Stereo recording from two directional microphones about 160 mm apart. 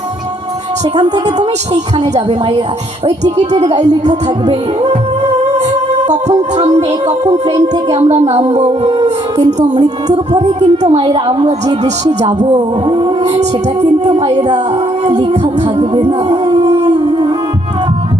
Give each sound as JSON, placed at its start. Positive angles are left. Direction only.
{"t": 0.9, "sound": "music", "side_deg": -25}
{"t": 1.4, "sound": "speech", "side_deg": -45}
{"t": 3.2, "sound": "speech", "side_deg": -45}
{"t": 6.1, "sound": "speech", "side_deg": -45}
{"t": 7.9, "sound": "speech", "side_deg": -40}
{"t": 9.7, "sound": "music", "side_deg": -25}
{"t": 10.4, "sound": "a woman's voice", "side_deg": -40}
{"t": 12.5, "sound": "music", "side_deg": -30}
{"t": 16.6, "sound": "howl", "side_deg": -25}